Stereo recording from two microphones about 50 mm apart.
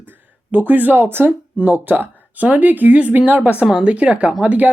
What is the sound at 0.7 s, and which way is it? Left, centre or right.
Speech, right.